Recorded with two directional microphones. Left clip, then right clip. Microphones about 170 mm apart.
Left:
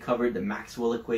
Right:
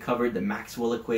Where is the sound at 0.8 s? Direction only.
15° right (ahead or behind).